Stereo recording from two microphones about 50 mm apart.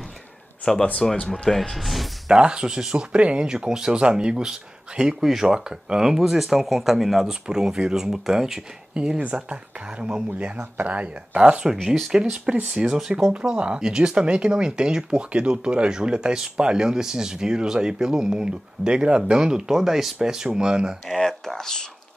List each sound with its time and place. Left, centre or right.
0.7 s speech: centre
2.3 s speech: centre
7.4 s speech: centre
9.2 s speech: right
11.3 s speech: centre
11.7 s speech: centre
12.1 s speech: centre
13.3 s speech: right
21.1 s speech: centre